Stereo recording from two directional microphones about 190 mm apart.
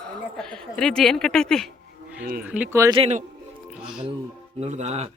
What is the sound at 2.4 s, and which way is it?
Speech, 10° right (ahead or behind).